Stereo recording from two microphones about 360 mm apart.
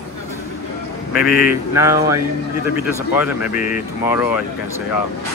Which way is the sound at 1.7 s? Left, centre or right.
Centre.